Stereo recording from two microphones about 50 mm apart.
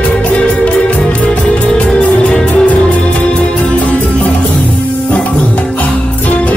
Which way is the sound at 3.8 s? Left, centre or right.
Left.